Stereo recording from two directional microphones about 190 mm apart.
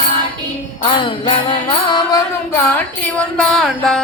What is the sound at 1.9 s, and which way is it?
Music, 15° left (ahead or behind).